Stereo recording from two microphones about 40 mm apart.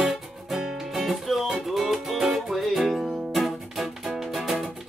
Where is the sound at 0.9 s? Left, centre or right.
Centre.